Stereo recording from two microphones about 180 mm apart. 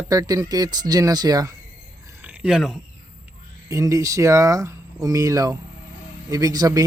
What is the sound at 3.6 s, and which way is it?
Speech, 20° right (ahead or behind).